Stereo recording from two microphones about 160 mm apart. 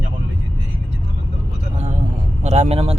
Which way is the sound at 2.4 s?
45° right (ahead or behind).